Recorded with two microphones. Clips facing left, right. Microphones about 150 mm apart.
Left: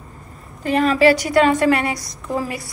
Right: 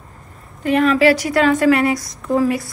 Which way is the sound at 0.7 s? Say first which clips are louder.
Right 2 dB; 35° left (ahead or behind).